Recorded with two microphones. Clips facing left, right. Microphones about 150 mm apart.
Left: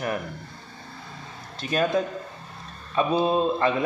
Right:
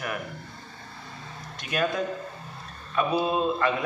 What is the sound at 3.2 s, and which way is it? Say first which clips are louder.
Speech: left 3 dB; 30° left (ahead or behind).